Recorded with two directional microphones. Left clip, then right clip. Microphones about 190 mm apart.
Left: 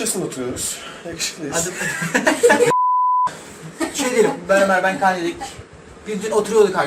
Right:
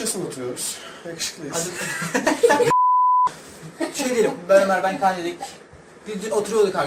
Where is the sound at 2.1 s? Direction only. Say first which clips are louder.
Left 3 dB; 15° right (ahead or behind).